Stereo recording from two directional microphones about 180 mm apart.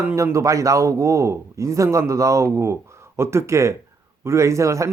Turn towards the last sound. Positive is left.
turn(degrees=-15)  # may be behind; listen again after turning